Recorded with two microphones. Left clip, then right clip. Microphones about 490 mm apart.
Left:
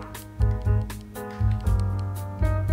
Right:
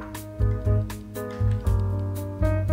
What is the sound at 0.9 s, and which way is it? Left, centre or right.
Music, centre.